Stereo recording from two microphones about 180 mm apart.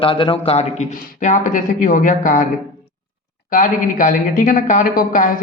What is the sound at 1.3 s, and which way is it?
Speech, 45° left (ahead or behind).